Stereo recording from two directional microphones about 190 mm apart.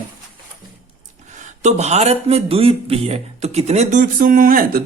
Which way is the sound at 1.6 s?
35° right (ahead or behind).